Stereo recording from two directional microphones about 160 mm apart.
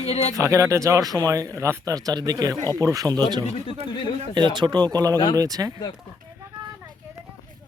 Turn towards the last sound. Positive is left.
turn(degrees=-20)  # may be behind; listen again after turning